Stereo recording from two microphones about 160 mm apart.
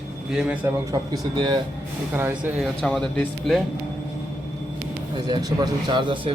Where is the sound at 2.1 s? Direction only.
15° right (ahead or behind).